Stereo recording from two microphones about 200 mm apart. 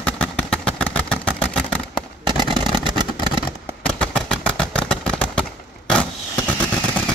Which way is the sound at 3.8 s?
5° left (ahead or behind).